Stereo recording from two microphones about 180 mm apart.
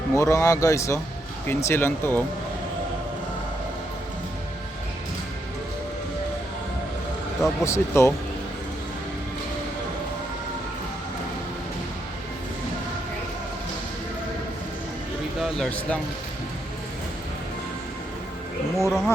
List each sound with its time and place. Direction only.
0.1 s speech: 15° left (ahead or behind)
7.6 s speech: 15° left (ahead or behind)
15.4 s speech: centre (ahead or behind)
18.8 s speech: centre (ahead or behind)